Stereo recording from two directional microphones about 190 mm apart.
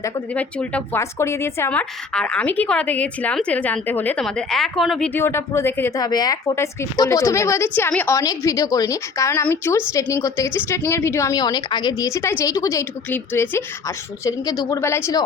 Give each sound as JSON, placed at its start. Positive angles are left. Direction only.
{"t": 0.0, "sound": "a woman's voice", "side_deg": 5}